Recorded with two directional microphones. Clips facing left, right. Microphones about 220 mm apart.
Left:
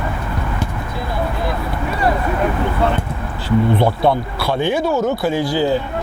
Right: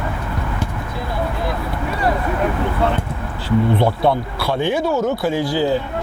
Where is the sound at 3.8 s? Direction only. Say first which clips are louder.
Left 1 dB; 40° left (ahead or behind).